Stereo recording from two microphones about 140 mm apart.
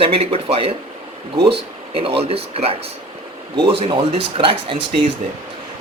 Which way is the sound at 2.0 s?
45° right (ahead or behind).